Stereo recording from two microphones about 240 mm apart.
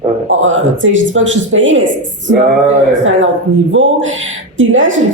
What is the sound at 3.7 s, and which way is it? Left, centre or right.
Speech, right.